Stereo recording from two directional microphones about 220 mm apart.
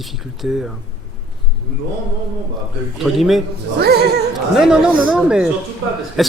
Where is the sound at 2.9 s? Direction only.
Centre (ahead or behind).